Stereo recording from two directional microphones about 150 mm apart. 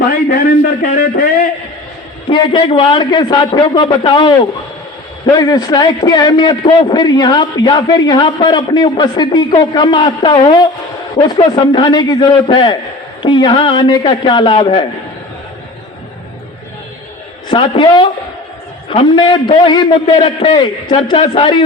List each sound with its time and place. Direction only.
0.1 s a man's voice: 85° left
2.3 s a man's voice: 35° left (ahead or behind)
17.5 s a man's voice: 35° left (ahead or behind)